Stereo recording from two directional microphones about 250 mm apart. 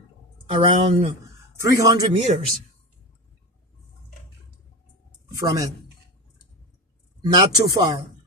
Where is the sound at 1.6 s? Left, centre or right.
Centre.